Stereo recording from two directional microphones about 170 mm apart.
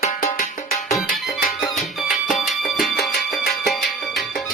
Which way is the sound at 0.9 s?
Centre (ahead or behind).